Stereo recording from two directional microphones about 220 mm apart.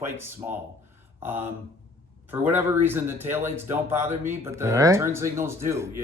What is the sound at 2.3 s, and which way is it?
Speech, 10° right (ahead or behind).